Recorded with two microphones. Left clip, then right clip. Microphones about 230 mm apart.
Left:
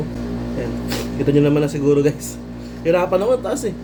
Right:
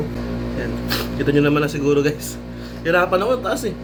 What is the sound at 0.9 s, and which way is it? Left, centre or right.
Speech, centre.